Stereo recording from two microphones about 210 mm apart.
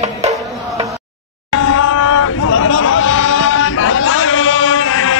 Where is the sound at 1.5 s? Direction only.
75° left (ahead or behind).